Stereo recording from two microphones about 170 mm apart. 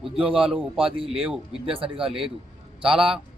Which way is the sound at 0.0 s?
5° right (ahead or behind).